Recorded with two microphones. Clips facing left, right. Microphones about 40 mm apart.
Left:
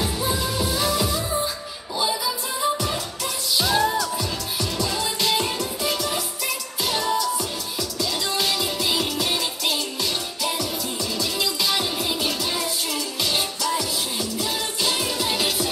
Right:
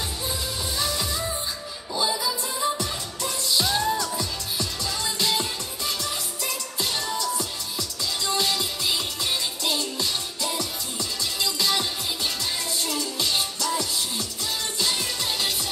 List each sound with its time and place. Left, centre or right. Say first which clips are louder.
0.0 s music: left 6 dB; centre
5.0 s music: left 1 dB; centre
7.2 s music: left 4 dB; centre
11.4 s music: right 1 dB; centre